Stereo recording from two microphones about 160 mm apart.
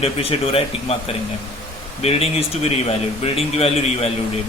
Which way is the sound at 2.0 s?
40° left (ahead or behind).